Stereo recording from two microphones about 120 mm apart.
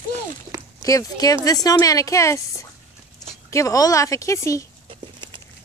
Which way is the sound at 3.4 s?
25° left (ahead or behind).